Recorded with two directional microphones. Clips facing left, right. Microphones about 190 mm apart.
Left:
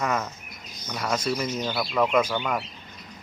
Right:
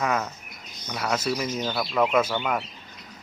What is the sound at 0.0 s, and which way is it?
A man's voice, centre (ahead or behind).